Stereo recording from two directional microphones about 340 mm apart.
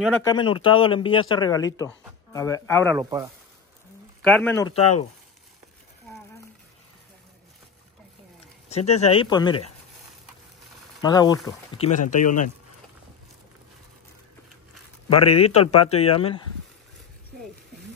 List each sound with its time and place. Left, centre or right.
0.0 s speech: centre
3.0 s speech: centre
4.2 s a man's voice: centre
8.6 s a sound: centre
9.0 s speech: centre
11.0 s speech: centre
15.3 s speech: centre